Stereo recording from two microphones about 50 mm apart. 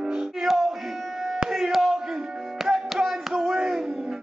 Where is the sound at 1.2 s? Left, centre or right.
Centre.